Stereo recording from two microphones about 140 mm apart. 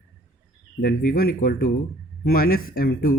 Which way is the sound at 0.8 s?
90° left.